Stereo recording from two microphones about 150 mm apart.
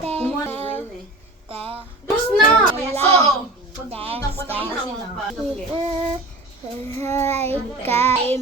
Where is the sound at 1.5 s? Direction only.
40° right (ahead or behind).